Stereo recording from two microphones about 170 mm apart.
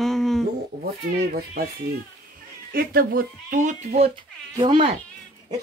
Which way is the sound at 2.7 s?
60° right (ahead or behind).